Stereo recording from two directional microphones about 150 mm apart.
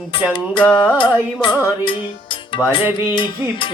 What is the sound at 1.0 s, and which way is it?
Music, 35° left (ahead or behind).